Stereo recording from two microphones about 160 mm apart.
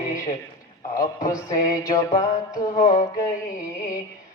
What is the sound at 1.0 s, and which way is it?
Music, 60° left (ahead or behind).